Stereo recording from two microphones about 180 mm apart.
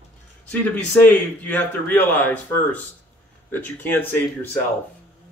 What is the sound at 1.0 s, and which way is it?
Speech, 10° left (ahead or behind).